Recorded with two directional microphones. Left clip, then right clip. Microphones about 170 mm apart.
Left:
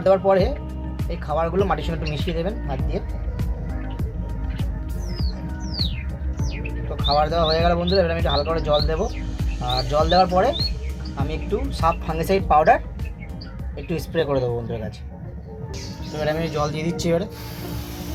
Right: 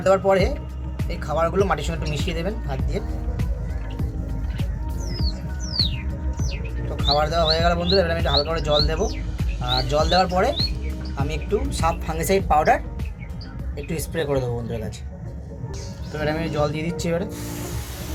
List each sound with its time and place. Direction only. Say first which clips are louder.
0.0 s speech: left 1 dB; 15° left (ahead or behind)
7.0 s speech: left 1 dB; 20° left (ahead or behind)
13.9 s speech: left 2 dB; 25° left (ahead or behind)
16.2 s speech: even; 25° left (ahead or behind)